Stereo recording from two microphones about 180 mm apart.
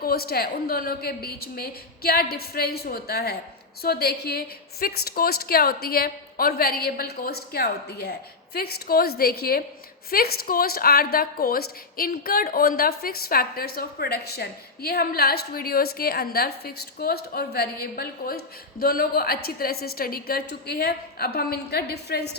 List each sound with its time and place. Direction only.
0.0 s a woman's voice: 55° left (ahead or behind)